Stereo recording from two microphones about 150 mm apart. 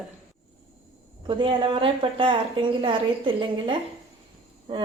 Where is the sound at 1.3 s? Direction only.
35° right (ahead or behind).